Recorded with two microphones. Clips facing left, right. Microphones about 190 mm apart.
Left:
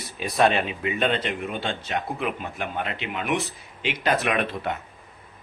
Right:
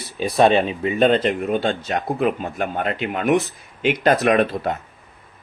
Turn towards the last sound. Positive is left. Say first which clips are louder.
# right 8 dB
turn(degrees=-40)  # may be behind; listen again after turning